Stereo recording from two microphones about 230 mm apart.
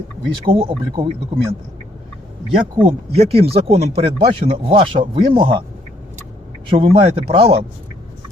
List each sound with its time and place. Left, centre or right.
0.4 s speech: right
2.8 s speech: right
6.7 s speech: right